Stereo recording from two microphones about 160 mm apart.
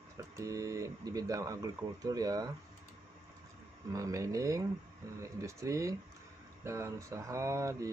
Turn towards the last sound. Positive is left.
turn(degrees=-20)  # may be behind; listen again after turning